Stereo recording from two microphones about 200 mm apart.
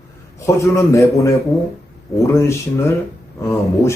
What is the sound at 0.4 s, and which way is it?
Speech, 15° left (ahead or behind).